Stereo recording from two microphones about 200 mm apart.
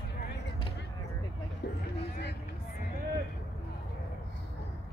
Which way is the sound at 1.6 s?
55° left (ahead or behind).